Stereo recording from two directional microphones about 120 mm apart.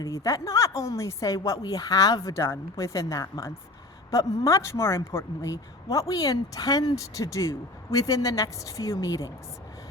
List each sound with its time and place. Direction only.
0.0 s a woman's voice: 30° left (ahead or behind)